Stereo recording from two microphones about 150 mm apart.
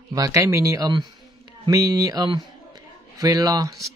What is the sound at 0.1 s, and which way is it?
Speech, 20° right (ahead or behind).